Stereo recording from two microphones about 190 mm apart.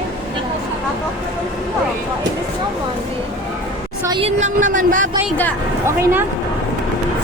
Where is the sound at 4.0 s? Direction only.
25° right (ahead or behind).